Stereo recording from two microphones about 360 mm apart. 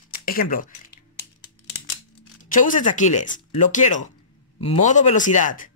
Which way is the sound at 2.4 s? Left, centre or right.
Left.